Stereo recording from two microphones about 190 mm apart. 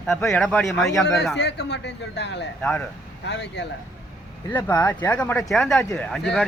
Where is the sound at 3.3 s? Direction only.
65° left (ahead or behind).